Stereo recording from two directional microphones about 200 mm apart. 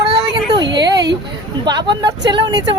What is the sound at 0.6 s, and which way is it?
Speech, 60° right (ahead or behind).